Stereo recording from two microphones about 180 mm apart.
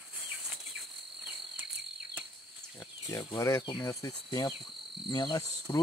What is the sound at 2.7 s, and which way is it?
Speech, 25° left (ahead or behind).